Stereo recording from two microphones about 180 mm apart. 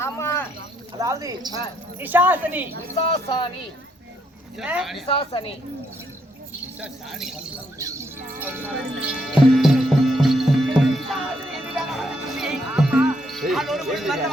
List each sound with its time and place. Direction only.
0.0 s a sound: 15° left (ahead or behind)
0.9 s speech: 20° right (ahead or behind)
3.2 s speech: 30° left (ahead or behind)
4.5 s speech: 5° right (ahead or behind)
5.0 s a woman's voice: 30° left (ahead or behind)
6.8 s speech: 5° right (ahead or behind)
7.8 s speech: 15° right (ahead or behind)
9.6 s music: centre (ahead or behind)